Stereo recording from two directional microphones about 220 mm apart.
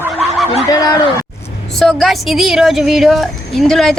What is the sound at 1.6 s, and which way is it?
Speech, centre (ahead or behind).